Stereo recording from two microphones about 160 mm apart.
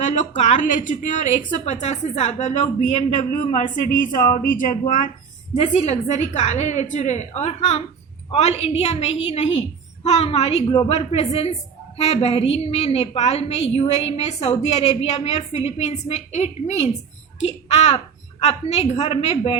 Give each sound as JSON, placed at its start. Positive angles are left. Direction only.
{"t": 0.0, "sound": "a woman's voice", "side_deg": 50}
{"t": 5.5, "sound": "a woman's voice", "side_deg": 45}